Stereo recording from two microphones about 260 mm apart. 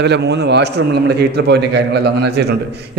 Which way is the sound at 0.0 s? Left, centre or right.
Right.